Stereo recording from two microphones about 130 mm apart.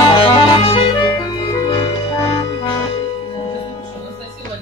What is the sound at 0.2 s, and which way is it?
Music, 45° left (ahead or behind).